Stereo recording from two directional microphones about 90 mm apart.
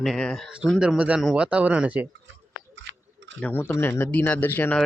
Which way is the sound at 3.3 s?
20° left (ahead or behind).